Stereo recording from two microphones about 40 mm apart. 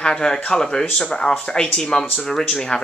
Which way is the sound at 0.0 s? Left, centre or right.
Centre.